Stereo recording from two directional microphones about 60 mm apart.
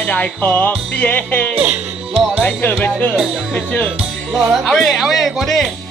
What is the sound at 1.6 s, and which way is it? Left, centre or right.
Speech, right.